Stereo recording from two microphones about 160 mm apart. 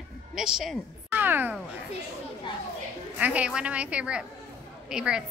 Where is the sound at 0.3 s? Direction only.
Centre (ahead or behind).